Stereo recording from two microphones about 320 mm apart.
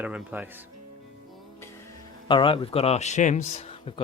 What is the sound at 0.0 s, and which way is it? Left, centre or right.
Speech, centre.